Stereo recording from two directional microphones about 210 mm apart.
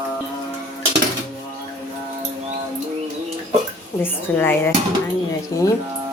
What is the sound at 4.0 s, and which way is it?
Speech, 10° left (ahead or behind).